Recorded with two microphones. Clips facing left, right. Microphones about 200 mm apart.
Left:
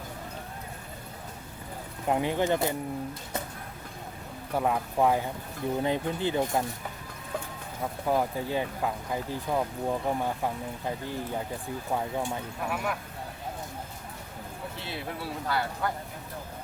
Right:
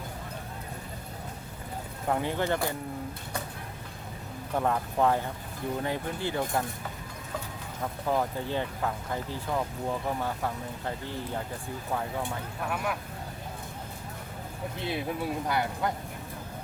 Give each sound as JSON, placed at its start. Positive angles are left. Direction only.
{"t": 2.0, "sound": "speech", "side_deg": 15}
{"t": 4.5, "sound": "speech", "side_deg": 10}
{"t": 8.0, "sound": "speech", "side_deg": 10}
{"t": 12.7, "sound": "speech", "side_deg": 0}
{"t": 14.8, "sound": "speech", "side_deg": -20}